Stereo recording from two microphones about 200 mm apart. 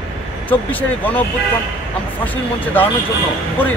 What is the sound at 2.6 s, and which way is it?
Speech, 10° left (ahead or behind).